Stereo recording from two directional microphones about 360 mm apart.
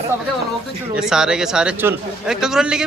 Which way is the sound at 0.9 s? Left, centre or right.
Centre.